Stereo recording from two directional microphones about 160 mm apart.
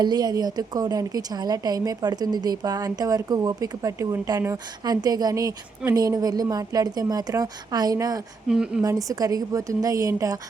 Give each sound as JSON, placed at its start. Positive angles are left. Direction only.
{"t": 0.0, "sound": "a woman's voice", "side_deg": -25}
{"t": 8.4, "sound": "a woman's voice", "side_deg": -5}
{"t": 8.8, "sound": "a woman's voice", "side_deg": -20}